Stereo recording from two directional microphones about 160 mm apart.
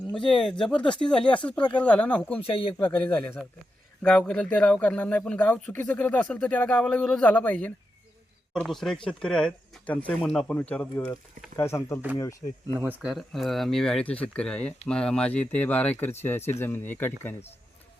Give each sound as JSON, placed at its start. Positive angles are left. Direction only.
{"t": 0.2, "sound": "speech", "side_deg": 0}
{"t": 0.8, "sound": "speech", "side_deg": 30}
{"t": 1.0, "sound": "speech", "side_deg": 5}
{"t": 2.4, "sound": "speech", "side_deg": 35}
{"t": 2.7, "sound": "speech", "side_deg": 10}
{"t": 12.6, "sound": "speech", "side_deg": -10}